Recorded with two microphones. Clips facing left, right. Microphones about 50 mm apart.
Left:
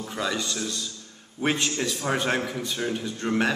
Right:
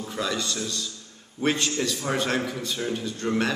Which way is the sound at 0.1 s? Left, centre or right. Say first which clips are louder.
Even; centre.